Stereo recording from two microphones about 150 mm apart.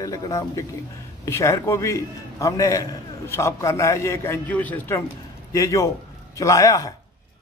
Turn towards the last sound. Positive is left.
turn(degrees=20)  # may be behind; listen again after turning